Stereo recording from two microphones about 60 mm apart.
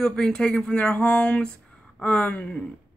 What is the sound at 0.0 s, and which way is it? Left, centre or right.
Speech, centre.